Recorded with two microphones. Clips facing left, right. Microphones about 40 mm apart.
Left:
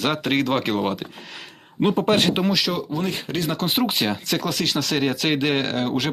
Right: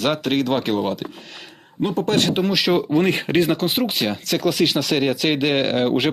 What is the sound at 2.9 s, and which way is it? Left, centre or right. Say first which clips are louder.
Speech: right 7 dB; right.